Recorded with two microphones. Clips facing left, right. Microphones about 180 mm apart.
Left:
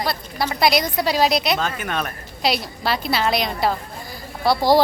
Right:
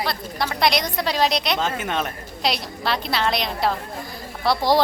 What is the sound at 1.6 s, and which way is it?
Speech, 20° right (ahead or behind).